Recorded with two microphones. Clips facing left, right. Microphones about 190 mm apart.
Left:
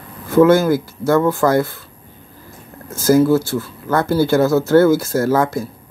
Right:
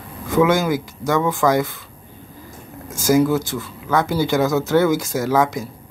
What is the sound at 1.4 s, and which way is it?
Speech, 5° left (ahead or behind).